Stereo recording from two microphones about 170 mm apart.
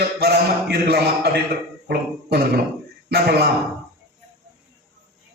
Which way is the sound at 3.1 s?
65° right (ahead or behind).